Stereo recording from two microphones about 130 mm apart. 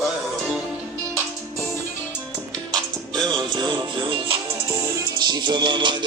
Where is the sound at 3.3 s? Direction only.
35° right (ahead or behind).